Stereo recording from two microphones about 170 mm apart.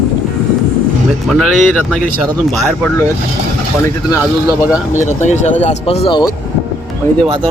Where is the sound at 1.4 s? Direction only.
5° left (ahead or behind).